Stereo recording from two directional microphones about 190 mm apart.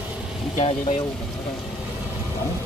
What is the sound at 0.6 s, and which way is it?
Speech, 35° left (ahead or behind).